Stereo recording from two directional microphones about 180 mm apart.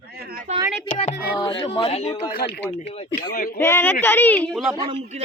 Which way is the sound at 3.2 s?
55° left (ahead or behind).